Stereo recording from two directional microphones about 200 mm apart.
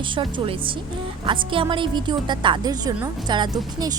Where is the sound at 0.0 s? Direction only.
25° right (ahead or behind).